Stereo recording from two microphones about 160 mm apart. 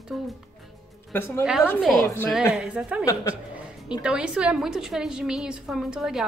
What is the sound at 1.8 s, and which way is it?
A woman's voice, centre (ahead or behind).